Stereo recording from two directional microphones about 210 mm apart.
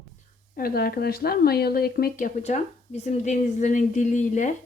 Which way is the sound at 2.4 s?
30° left (ahead or behind).